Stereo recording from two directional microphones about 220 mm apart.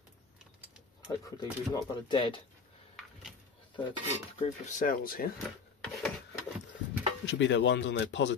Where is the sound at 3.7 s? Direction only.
30° left (ahead or behind).